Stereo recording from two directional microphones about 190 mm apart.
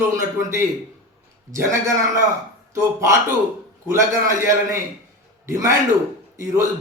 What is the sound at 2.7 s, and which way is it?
A man's voice, 15° right (ahead or behind).